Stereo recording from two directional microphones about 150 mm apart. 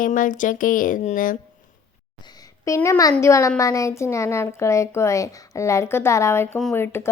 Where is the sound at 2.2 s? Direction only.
25° left (ahead or behind).